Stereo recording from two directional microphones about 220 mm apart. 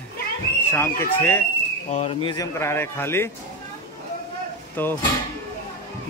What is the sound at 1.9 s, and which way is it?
Speech, 30° left (ahead or behind).